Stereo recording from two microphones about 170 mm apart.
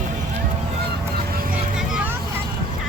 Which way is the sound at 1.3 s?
60° right (ahead or behind).